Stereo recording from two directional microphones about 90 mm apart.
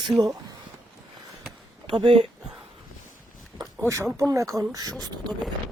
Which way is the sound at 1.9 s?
70° right (ahead or behind).